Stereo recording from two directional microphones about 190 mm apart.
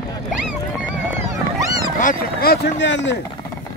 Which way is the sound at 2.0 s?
50° left (ahead or behind).